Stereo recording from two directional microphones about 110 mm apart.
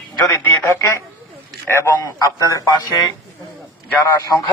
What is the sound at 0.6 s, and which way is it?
A woman's voice, 25° left (ahead or behind).